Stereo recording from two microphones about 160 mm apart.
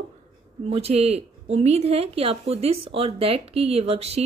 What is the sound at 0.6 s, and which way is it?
Speech, 40° right (ahead or behind).